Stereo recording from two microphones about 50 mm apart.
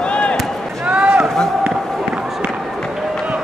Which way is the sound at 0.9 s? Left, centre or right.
Right.